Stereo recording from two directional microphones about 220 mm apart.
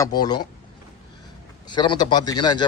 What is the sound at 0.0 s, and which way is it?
Speech, 20° left (ahead or behind).